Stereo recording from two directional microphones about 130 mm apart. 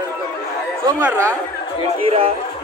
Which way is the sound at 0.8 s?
20° right (ahead or behind).